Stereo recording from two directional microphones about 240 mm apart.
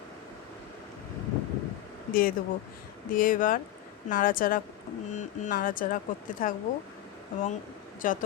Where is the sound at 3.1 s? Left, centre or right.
Left.